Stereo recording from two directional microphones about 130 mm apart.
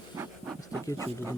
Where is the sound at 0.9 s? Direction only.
25° right (ahead or behind).